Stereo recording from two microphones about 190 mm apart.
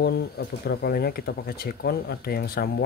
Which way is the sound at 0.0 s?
55° left (ahead or behind).